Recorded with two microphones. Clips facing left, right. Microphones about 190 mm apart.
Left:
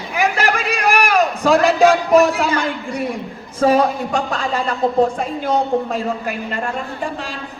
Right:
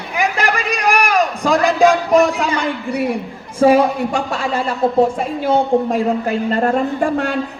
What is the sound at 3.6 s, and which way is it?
Speech, 10° right (ahead or behind).